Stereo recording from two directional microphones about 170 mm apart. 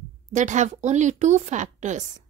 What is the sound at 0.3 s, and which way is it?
A woman's voice, 45° right (ahead or behind).